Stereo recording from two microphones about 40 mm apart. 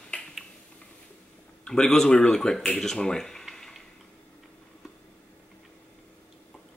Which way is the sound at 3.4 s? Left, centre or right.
Centre.